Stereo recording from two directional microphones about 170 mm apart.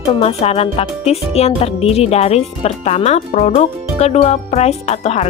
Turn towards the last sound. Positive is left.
turn(degrees=40)  # may be behind; listen again after turning